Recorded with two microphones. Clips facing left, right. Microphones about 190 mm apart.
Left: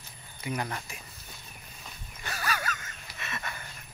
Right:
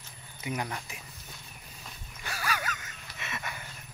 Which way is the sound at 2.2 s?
10° right (ahead or behind).